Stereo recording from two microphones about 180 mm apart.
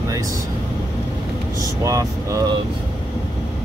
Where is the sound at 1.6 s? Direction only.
20° right (ahead or behind).